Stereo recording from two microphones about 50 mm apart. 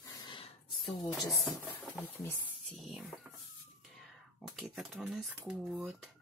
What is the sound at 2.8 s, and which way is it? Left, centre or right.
Speech, centre.